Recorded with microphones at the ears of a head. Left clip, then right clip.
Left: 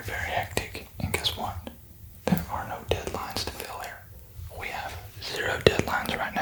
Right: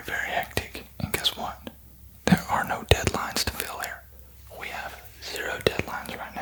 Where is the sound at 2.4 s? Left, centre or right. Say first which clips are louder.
Right 7 dB; right.